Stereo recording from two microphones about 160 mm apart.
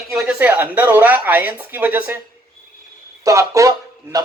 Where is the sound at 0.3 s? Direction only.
10° right (ahead or behind).